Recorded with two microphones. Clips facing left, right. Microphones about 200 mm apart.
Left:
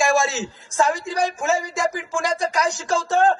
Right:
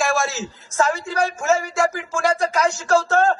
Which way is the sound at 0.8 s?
15° left (ahead or behind).